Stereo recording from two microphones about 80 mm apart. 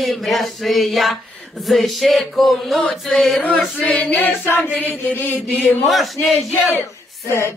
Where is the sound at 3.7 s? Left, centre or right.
Centre.